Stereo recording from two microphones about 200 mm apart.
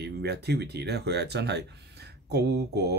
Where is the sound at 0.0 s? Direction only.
55° right (ahead or behind).